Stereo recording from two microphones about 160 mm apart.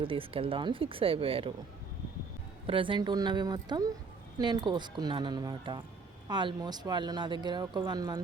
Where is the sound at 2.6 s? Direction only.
35° right (ahead or behind).